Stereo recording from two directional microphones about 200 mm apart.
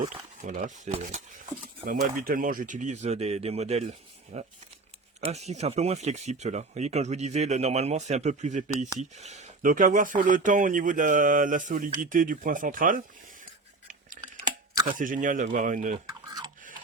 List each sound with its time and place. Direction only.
0.4 s speech: 40° right (ahead or behind)
14.2 s chewing: 40° right (ahead or behind)
14.8 s speech: 40° right (ahead or behind)